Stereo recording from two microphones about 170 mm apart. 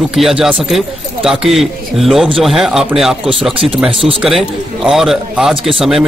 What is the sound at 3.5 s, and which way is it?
Speech, 30° right (ahead or behind).